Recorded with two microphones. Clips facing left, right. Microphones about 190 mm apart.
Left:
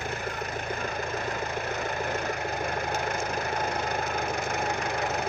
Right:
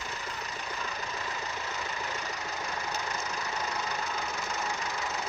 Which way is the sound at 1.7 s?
55° left (ahead or behind).